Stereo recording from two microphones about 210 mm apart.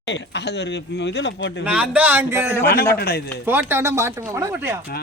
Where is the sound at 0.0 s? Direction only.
55° left (ahead or behind).